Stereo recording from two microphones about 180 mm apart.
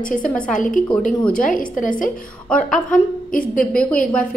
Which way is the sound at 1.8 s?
50° left (ahead or behind).